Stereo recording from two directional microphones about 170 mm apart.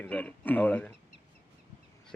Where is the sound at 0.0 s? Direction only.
10° left (ahead or behind).